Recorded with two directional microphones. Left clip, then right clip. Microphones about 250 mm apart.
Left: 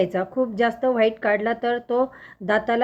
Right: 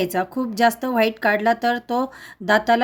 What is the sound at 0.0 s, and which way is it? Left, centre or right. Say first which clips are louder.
Speech: left 1 dB; right.